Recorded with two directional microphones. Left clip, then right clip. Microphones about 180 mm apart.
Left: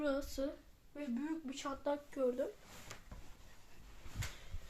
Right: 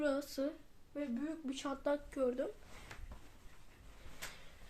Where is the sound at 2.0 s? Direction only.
25° right (ahead or behind).